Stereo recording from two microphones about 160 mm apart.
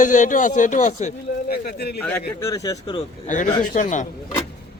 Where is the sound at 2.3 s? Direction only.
20° left (ahead or behind).